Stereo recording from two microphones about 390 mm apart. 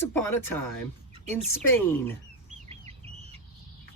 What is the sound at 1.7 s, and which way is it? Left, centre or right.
Speech, centre.